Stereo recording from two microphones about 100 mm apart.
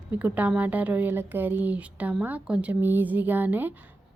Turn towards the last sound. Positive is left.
turn(degrees=-20)  # may be behind; listen again after turning